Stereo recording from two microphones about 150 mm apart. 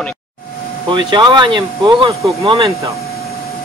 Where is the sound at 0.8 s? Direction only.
30° right (ahead or behind).